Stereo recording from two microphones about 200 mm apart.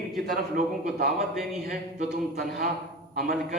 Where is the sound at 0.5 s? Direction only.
50° right (ahead or behind).